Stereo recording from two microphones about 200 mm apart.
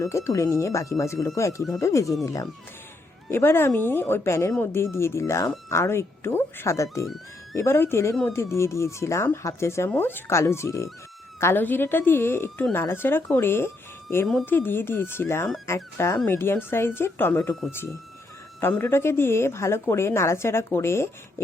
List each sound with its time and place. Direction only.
0.0 s speech: 15° left (ahead or behind)